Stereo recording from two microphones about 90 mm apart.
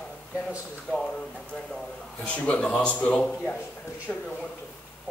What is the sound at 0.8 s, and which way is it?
Speech, 10° left (ahead or behind).